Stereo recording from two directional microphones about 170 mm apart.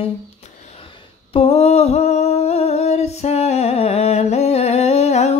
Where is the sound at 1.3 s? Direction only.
35° left (ahead or behind).